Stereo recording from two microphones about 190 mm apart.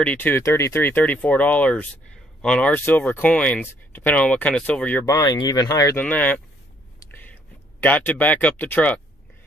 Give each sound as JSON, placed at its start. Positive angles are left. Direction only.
{"t": 0.0, "sound": "speech", "side_deg": 10}
{"t": 5.1, "sound": "speech", "side_deg": 20}
{"t": 7.0, "sound": "a sound", "side_deg": 10}
{"t": 7.8, "sound": "speech", "side_deg": 10}